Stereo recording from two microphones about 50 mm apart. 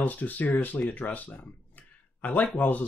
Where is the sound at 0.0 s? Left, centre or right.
Left.